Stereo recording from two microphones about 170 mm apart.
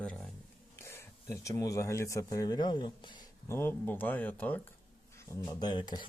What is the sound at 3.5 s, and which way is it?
Speech, 15° left (ahead or behind).